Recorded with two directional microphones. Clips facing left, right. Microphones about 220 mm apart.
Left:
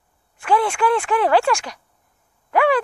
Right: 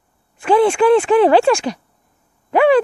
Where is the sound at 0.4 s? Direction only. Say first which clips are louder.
Right 7 dB; 25° right (ahead or behind).